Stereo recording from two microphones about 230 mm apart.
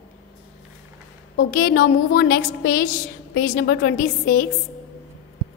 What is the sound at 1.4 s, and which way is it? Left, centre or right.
A woman's voice, left.